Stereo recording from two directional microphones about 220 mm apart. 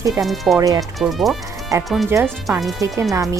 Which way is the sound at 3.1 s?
15° right (ahead or behind).